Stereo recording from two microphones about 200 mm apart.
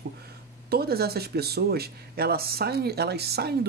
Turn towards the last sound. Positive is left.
turn(degrees=-55)  # may be behind; listen again after turning